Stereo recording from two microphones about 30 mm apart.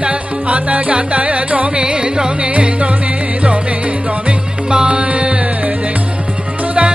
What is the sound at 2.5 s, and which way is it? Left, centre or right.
Music, right.